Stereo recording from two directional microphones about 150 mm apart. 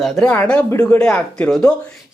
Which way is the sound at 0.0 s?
5° left (ahead or behind).